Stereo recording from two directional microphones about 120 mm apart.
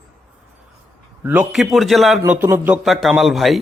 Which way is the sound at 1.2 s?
20° right (ahead or behind).